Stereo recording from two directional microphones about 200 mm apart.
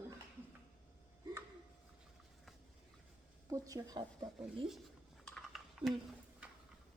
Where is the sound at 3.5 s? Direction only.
15° right (ahead or behind).